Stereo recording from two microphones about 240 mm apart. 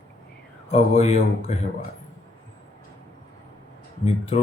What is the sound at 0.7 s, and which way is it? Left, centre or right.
Speech, left.